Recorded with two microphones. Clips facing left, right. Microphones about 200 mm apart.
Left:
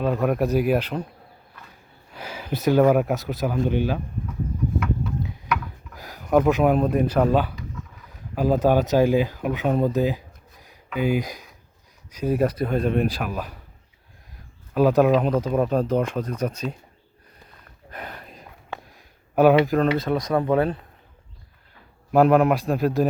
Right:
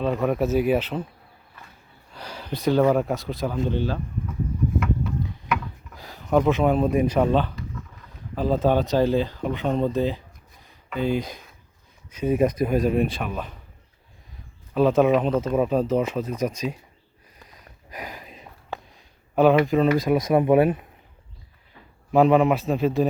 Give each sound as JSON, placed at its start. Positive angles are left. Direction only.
{"t": 0.0, "sound": "speech", "side_deg": 0}
{"t": 2.1, "sound": "speech", "side_deg": 10}
{"t": 6.2, "sound": "speech", "side_deg": 5}
{"t": 12.6, "sound": "speech", "side_deg": -15}
{"t": 13.0, "sound": "speech", "side_deg": 0}
{"t": 14.7, "sound": "speech", "side_deg": 0}
{"t": 17.9, "sound": "a sound", "side_deg": -5}
{"t": 19.6, "sound": "speech", "side_deg": 0}
{"t": 20.1, "sound": "speech", "side_deg": -20}
{"t": 22.1, "sound": "speech", "side_deg": 0}